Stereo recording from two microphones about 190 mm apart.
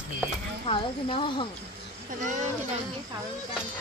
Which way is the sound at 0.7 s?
25° left (ahead or behind).